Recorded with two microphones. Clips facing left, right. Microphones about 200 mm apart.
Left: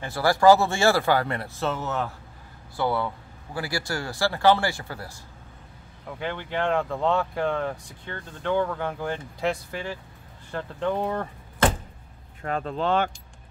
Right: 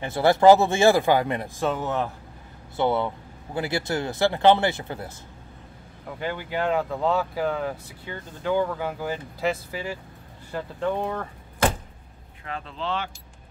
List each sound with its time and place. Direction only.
0.0 s speech: 20° right (ahead or behind)
6.0 s speech: 5° right (ahead or behind)
12.4 s speech: 45° left (ahead or behind)